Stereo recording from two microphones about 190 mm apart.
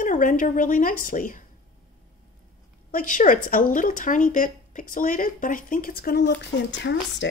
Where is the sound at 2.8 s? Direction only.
45° left (ahead or behind); by 6.9 s 65° left (ahead or behind).